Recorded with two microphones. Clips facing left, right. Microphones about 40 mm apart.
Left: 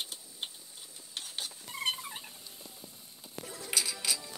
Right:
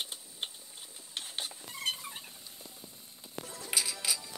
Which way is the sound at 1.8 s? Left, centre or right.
Centre.